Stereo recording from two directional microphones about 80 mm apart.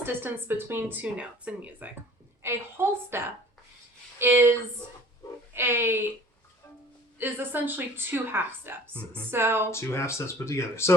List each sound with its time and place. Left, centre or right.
0.0 s a woman's voice: right
1.0 s speech: centre
2.4 s a woman's voice: right
5.5 s a woman's voice: right
7.2 s a woman's voice: right
8.9 s speech: centre
9.3 s a woman's voice: right
9.6 s speech: left